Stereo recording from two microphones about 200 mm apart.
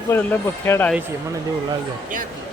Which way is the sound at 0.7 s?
10° left (ahead or behind).